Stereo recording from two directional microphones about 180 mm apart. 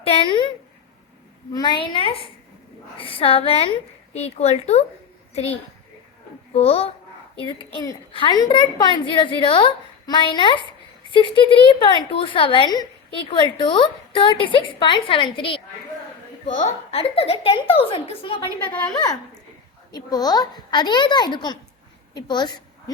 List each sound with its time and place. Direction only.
0.0 s a woman's voice: 30° left (ahead or behind)
1.5 s a woman's voice: 25° left (ahead or behind)
16.5 s a woman's voice: 40° left (ahead or behind)
19.9 s a woman's voice: 20° left (ahead or behind)